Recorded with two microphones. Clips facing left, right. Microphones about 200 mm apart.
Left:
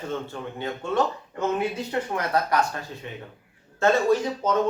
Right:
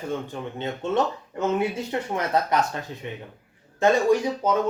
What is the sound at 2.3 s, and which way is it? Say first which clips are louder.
Speech: even; 20° right (ahead or behind).